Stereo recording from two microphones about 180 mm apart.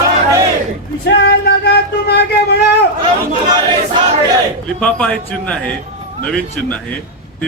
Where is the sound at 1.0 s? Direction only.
65° left (ahead or behind).